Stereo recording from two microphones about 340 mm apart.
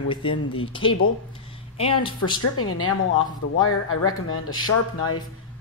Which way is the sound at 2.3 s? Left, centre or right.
Left.